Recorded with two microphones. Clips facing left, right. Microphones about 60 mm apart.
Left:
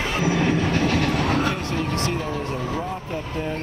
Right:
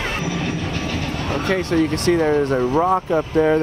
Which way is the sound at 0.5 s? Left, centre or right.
Left.